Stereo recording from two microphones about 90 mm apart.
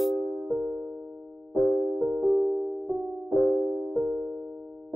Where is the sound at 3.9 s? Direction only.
15° left (ahead or behind).